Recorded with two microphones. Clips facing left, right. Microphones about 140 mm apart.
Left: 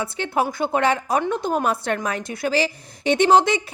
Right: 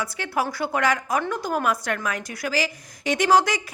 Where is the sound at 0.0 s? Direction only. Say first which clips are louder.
Left 3 dB; 25° left (ahead or behind).